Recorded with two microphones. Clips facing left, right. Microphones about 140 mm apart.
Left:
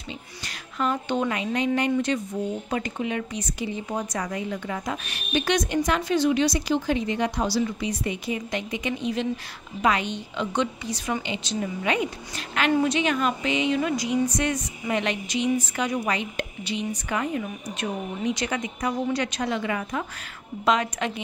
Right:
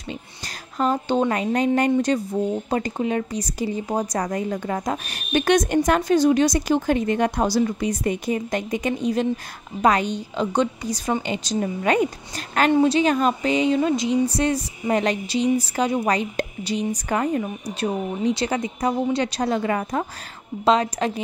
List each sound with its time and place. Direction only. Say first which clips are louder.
0.7 s a woman's voice: right 4 dB; 35° right (ahead or behind)
5.3 s a woman's voice: right 5 dB; 50° right (ahead or behind); by 21.1 s 35° right (ahead or behind)